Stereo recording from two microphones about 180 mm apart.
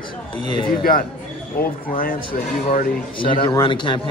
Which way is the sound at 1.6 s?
55° left (ahead or behind).